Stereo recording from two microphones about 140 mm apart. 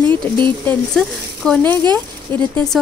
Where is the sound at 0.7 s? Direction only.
5° left (ahead or behind).